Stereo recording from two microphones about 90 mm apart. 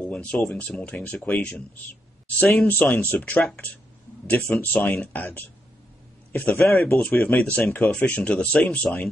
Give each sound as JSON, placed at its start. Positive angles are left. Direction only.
{"t": 0.0, "sound": "speech", "side_deg": 10}